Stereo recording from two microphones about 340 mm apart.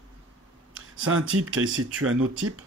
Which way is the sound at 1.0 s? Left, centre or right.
Right.